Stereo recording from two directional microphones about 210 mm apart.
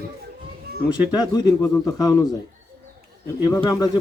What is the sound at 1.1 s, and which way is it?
Speech, 20° left (ahead or behind).